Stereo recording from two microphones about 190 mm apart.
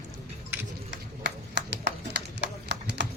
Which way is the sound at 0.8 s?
65° right (ahead or behind).